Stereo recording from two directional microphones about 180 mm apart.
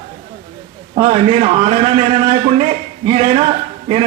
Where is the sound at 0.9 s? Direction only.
35° right (ahead or behind).